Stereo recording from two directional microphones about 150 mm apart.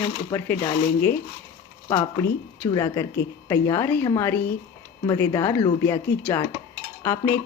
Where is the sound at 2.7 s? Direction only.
20° left (ahead or behind).